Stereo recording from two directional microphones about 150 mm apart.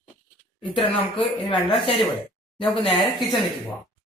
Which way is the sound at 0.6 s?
35° left (ahead or behind).